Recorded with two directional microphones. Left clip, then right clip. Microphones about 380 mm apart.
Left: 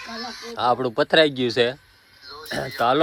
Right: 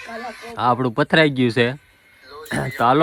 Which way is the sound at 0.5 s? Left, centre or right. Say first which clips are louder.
Right 2 dB; centre.